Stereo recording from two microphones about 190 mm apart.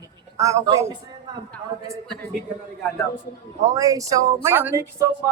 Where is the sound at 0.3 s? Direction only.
15° right (ahead or behind).